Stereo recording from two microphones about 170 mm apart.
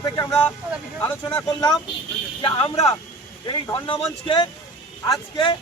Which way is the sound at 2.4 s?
30° left (ahead or behind).